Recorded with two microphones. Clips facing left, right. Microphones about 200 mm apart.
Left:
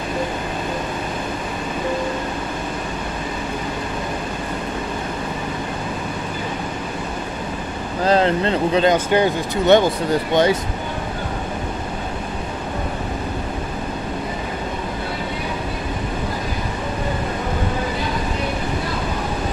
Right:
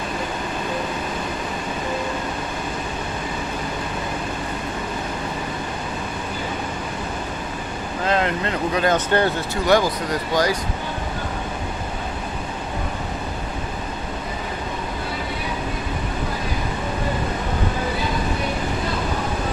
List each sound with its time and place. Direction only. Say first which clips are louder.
8.0 s speech: left 5 dB; 35° left (ahead or behind)
8.9 s speech: left 2 dB; 15° left (ahead or behind)
9.7 s speech: left 4 dB; 25° left (ahead or behind)